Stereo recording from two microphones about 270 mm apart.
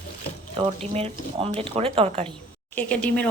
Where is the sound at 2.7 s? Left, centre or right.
Centre.